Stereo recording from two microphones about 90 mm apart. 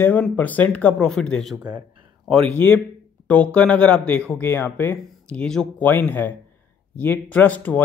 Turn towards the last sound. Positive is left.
turn(degrees=15)  # may be behind; listen again after turning